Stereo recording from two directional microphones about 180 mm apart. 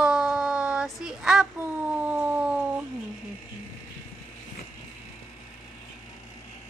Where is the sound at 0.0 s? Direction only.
5° right (ahead or behind).